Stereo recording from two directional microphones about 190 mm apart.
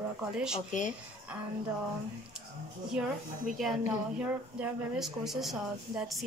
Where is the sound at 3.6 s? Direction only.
5° right (ahead or behind).